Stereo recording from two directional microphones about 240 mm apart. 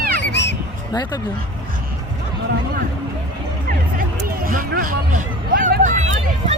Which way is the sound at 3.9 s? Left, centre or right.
Right.